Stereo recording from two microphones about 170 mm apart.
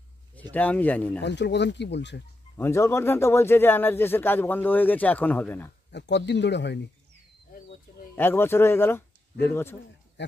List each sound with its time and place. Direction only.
0.4 s speech: 10° left (ahead or behind)
1.2 s speech: 90° left
2.5 s speech: 15° left (ahead or behind)
5.9 s speech: 90° left
8.2 s speech: 15° left (ahead or behind)